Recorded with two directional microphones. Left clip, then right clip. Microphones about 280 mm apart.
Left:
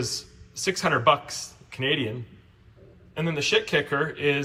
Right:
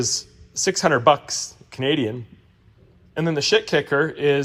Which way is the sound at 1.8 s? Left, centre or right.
Right.